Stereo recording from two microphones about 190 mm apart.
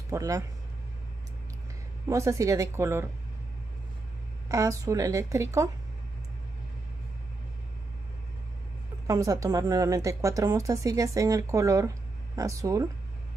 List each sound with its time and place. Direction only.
0.1 s speech: 15° right (ahead or behind)
2.0 s speech: 15° right (ahead or behind)
4.5 s speech: 15° right (ahead or behind)
9.0 s speech: 15° right (ahead or behind)